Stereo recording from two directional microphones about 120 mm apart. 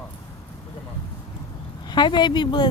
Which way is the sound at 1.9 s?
40° left (ahead or behind).